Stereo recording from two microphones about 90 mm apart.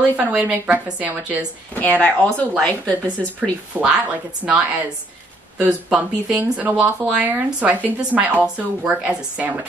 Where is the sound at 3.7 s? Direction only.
20° right (ahead or behind).